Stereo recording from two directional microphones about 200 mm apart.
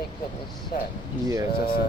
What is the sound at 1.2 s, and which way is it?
Speech, 15° right (ahead or behind).